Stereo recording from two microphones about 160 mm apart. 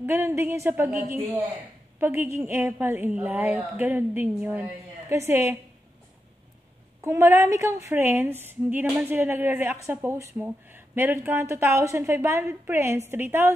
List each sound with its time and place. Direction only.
0.0 s speech: 15° right (ahead or behind)
7.0 s a woman's voice: 20° right (ahead or behind)